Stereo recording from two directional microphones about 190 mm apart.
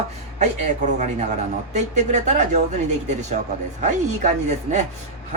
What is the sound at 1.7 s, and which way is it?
Speech, 35° right (ahead or behind).